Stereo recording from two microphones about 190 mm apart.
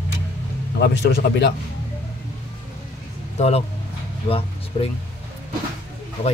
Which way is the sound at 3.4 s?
35° left (ahead or behind).